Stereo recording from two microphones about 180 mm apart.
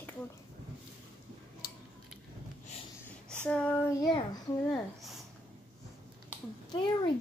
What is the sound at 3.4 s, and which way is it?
Child singing, 5° left (ahead or behind).